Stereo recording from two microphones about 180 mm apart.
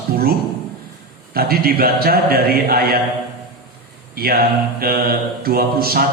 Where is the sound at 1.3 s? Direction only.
55° right (ahead or behind).